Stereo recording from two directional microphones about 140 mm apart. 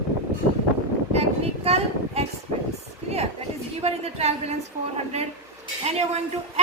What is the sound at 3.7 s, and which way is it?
Speech, 45° right (ahead or behind).